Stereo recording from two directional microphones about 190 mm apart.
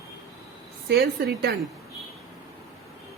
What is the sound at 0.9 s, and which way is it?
Speech, 55° right (ahead or behind).